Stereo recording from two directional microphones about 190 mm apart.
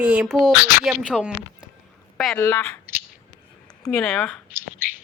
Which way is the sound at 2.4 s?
10° left (ahead or behind).